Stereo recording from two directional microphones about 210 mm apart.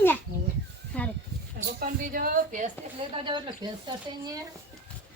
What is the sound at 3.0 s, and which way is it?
Speech, 25° right (ahead or behind).